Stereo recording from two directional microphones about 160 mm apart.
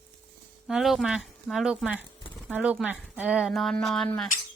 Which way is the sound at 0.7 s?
Centre (ahead or behind).